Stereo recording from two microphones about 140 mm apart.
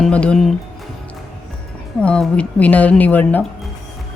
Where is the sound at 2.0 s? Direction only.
5° left (ahead or behind).